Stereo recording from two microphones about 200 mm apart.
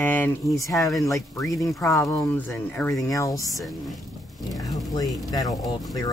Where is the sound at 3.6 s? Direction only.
Centre (ahead or behind).